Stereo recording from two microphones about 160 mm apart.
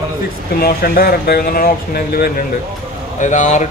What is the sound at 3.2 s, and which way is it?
Speech, 50° left (ahead or behind).